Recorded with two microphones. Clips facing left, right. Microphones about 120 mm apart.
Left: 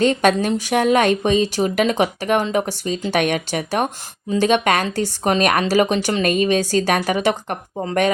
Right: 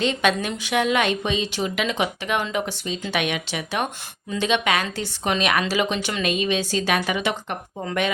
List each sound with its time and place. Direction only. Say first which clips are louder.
0.0 s speech: left 6 dB; 45° left (ahead or behind)